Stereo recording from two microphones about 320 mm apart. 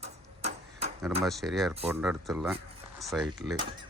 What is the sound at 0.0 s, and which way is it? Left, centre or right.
Tick-tock, centre.